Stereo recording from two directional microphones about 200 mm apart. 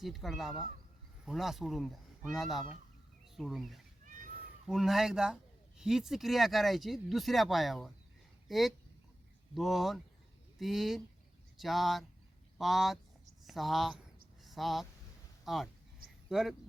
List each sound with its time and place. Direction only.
0.0 s speech: centre (ahead or behind)
4.0 s cat: 40° right (ahead or behind)
4.6 s speech: centre (ahead or behind)